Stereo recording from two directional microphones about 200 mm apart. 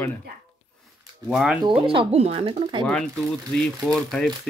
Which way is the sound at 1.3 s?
Centre (ahead or behind).